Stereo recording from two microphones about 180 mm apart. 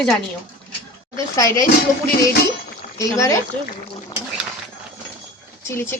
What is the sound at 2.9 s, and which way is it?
Speech, 20° left (ahead or behind).